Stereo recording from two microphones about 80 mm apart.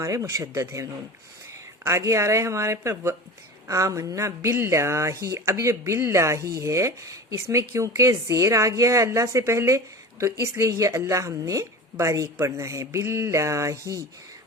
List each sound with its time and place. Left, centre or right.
0.0 s speech: right